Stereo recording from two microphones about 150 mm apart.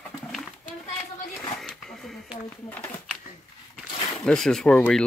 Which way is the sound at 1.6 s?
5° left (ahead or behind).